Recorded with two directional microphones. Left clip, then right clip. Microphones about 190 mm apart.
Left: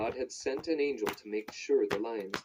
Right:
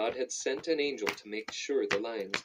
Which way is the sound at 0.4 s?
25° right (ahead or behind).